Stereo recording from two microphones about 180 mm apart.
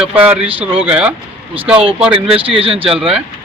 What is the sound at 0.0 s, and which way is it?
Speech, 10° right (ahead or behind).